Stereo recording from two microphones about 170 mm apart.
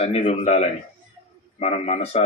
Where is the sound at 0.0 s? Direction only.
35° left (ahead or behind).